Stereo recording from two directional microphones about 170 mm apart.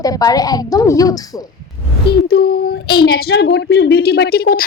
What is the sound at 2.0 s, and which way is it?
Speech, 65° left (ahead or behind).